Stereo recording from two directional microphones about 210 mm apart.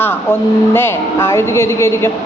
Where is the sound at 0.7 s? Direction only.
10° left (ahead or behind).